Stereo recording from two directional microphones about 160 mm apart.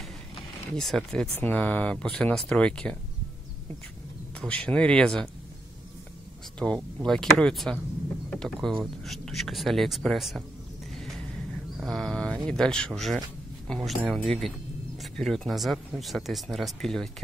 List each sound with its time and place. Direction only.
0.7 s speech: centre (ahead or behind)
4.4 s speech: 10° left (ahead or behind)
6.6 s speech: 5° left (ahead or behind)
11.0 s a sound: centre (ahead or behind)
11.7 s speech: centre (ahead or behind)